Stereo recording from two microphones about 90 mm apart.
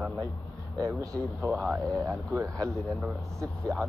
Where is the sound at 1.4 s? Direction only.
25° right (ahead or behind).